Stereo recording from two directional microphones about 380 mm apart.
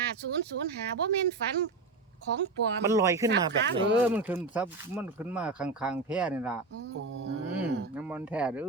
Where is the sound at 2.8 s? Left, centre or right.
Centre.